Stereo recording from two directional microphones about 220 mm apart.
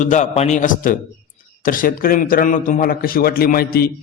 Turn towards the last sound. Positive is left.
turn(degrees=45)  # may be behind; listen again after turning